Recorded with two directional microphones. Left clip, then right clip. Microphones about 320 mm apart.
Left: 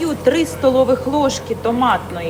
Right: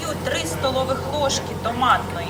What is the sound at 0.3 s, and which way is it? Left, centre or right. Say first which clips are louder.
Speech: left 9 dB; centre.